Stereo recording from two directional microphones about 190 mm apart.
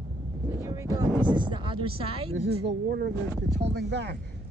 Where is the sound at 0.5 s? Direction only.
15° right (ahead or behind).